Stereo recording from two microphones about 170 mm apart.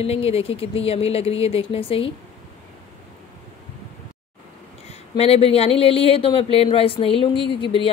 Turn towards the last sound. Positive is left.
turn(degrees=30)  # may be behind; listen again after turning